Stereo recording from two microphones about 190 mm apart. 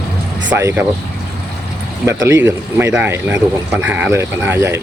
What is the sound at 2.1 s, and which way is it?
Speech, 15° right (ahead or behind).